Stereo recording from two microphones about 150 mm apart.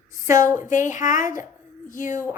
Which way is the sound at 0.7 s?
60° left (ahead or behind).